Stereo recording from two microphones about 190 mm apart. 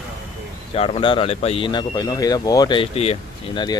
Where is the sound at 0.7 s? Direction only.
30° left (ahead or behind).